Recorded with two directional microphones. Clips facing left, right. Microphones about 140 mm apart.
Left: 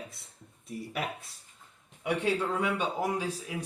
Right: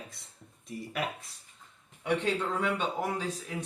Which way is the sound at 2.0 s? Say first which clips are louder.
Left 1 dB; 10° left (ahead or behind).